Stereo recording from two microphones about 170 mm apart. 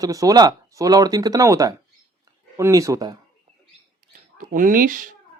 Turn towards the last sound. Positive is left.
turn(degrees=-55)  # may be behind; listen again after turning